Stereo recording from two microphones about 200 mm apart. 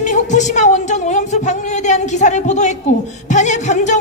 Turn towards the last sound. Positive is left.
turn(degrees=35)  # may be behind; listen again after turning